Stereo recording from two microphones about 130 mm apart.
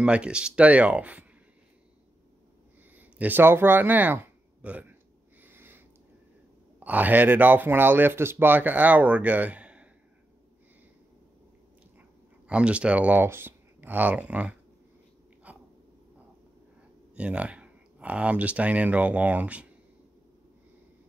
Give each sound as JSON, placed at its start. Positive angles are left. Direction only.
{"t": 0.0, "sound": "speech", "side_deg": -10}
{"t": 3.0, "sound": "speech", "side_deg": -15}
{"t": 5.4, "sound": "a sound", "side_deg": -15}
{"t": 6.8, "sound": "speech", "side_deg": -15}
{"t": 12.4, "sound": "speech", "side_deg": -10}
{"t": 15.5, "sound": "a sound", "side_deg": -10}
{"t": 17.1, "sound": "speech", "side_deg": -10}